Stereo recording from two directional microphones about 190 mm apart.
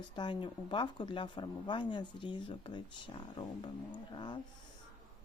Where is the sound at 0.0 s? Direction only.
25° left (ahead or behind).